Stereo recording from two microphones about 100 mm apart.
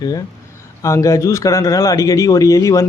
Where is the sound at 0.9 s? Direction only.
35° left (ahead or behind).